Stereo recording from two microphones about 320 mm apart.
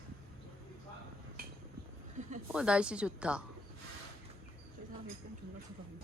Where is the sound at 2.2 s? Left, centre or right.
Right.